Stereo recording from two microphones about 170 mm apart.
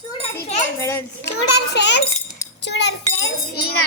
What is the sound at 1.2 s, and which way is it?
A child's voice, 90° left.